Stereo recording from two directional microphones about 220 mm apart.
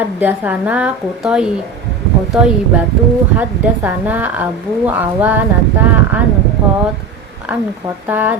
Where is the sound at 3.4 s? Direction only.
10° right (ahead or behind).